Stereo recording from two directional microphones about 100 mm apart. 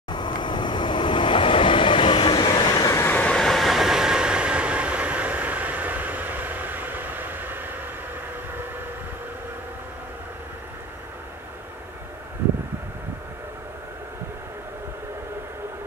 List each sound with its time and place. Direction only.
0.1 s train: 50° left (ahead or behind)
3.0 s train: 20° left (ahead or behind)
3.3 s train: 5° left (ahead or behind); by 7.8 s 20° right (ahead or behind)